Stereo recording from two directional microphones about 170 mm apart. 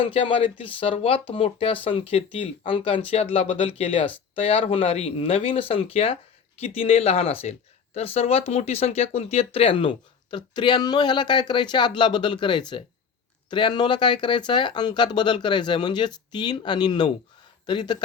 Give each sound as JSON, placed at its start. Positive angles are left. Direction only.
{"t": 0.0, "sound": "speech", "side_deg": 30}